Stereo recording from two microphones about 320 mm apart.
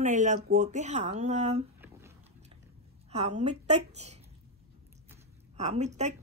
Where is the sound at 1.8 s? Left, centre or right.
Centre.